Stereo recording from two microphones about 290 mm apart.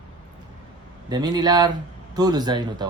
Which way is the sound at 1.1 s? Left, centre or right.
Centre.